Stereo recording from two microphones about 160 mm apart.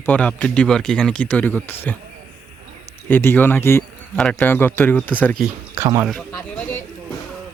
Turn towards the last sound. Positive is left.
turn(degrees=10)  # may be behind; listen again after turning